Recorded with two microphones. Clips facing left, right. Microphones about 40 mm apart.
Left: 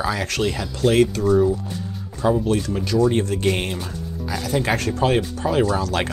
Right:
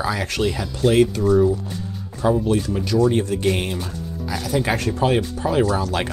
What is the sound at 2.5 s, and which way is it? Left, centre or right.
Speech, left.